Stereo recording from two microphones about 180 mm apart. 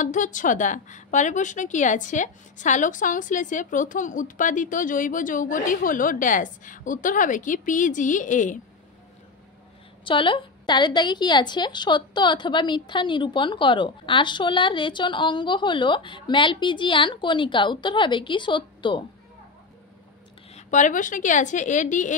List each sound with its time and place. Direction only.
0.0 s a woman's voice: 45° left (ahead or behind)
10.0 s a woman's voice: 30° left (ahead or behind)
20.5 s a woman's voice: 45° left (ahead or behind)